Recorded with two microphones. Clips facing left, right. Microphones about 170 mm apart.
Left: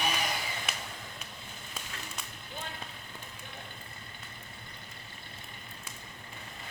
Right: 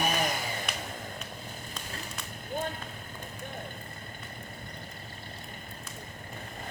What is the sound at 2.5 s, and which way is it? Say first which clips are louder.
Vehicle: right 10 dB; 45° right (ahead or behind).